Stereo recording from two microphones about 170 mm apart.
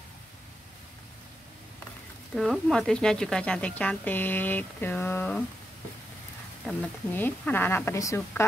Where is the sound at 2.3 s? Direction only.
Centre (ahead or behind).